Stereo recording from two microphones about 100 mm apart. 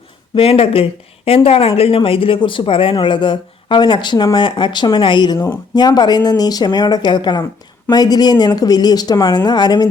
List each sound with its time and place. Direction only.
0.3 s speech: 70° left (ahead or behind)
2.0 s speech: 65° left (ahead or behind); by 9.8 s 45° left (ahead or behind)